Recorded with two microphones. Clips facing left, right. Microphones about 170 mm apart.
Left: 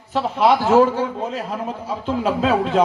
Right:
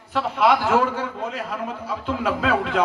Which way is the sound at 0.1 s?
30° left (ahead or behind).